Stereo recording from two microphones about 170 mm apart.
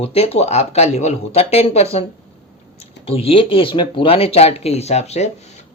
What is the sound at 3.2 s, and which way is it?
Speech, 35° left (ahead or behind).